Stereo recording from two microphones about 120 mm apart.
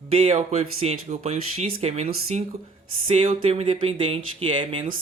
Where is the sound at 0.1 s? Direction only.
50° right (ahead or behind).